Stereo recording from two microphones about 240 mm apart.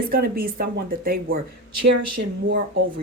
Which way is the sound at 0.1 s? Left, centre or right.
Right.